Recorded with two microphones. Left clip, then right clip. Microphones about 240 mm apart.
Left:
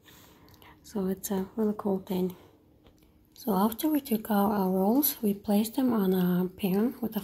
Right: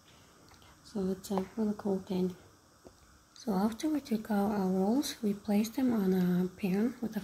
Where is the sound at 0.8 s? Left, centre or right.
Centre.